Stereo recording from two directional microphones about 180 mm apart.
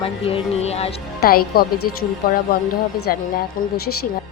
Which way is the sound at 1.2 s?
55° left (ahead or behind).